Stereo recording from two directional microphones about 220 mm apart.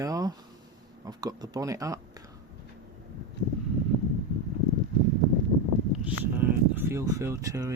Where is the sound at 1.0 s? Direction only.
15° right (ahead or behind).